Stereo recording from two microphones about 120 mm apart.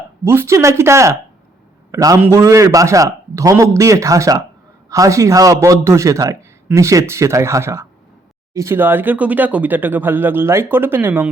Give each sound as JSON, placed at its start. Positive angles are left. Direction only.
{"t": 0.3, "sound": "a man's voice", "side_deg": -20}